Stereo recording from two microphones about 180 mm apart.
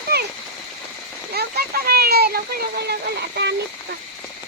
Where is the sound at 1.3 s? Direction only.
60° right (ahead or behind).